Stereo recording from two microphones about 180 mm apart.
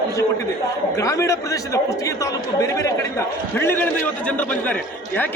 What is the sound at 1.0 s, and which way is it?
Speech, 20° left (ahead or behind).